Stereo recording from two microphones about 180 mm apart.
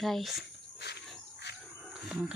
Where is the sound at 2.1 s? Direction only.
5° right (ahead or behind).